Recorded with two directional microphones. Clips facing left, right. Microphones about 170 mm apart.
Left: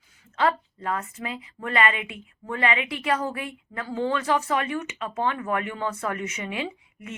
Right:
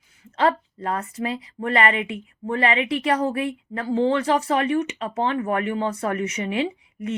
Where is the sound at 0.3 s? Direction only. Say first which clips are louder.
Right 3 dB; 35° right (ahead or behind).